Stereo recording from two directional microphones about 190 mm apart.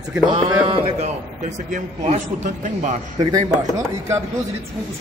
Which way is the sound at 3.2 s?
20° right (ahead or behind).